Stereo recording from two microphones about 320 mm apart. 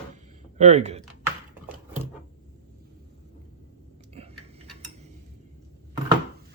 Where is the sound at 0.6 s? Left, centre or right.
Right.